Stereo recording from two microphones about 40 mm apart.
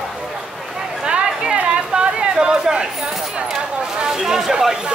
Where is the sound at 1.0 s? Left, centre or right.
Right.